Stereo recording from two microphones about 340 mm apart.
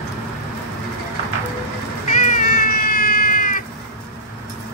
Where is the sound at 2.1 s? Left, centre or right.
Left.